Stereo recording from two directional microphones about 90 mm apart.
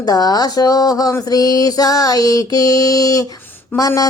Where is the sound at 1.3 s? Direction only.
45° left (ahead or behind).